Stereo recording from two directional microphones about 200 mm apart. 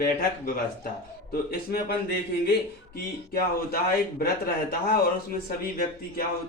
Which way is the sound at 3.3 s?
50° left (ahead or behind).